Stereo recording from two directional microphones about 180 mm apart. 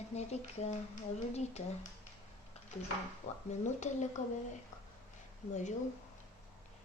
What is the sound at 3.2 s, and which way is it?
Speech, 35° left (ahead or behind).